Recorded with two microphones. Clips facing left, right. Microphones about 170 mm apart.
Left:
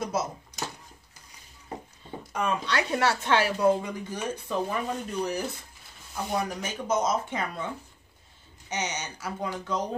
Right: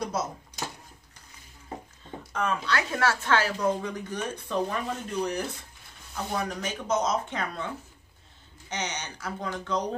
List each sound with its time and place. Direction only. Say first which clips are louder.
2.3 s speech: left 1 dB; 15° left (ahead or behind)
2.7 s speech: left 1 dB; 25° left (ahead or behind)
3.3 s speech: left 3 dB; 10° left (ahead or behind)
8.6 s speech: left 1 dB; 10° left (ahead or behind)